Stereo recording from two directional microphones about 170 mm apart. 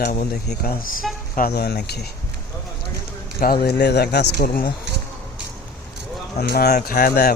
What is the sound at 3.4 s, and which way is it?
Speech, 65° left (ahead or behind).